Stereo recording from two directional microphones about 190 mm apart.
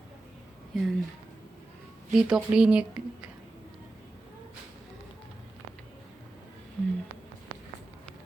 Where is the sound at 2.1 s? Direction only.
5° right (ahead or behind).